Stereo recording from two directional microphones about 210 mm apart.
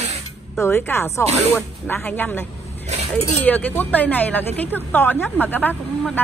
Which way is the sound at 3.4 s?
10° left (ahead or behind).